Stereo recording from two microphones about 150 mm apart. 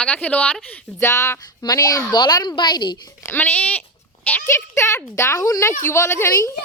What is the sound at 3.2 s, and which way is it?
Speech, 15° left (ahead or behind).